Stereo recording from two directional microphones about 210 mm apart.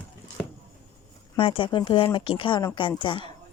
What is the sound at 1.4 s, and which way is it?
A woman's voice, 25° left (ahead or behind).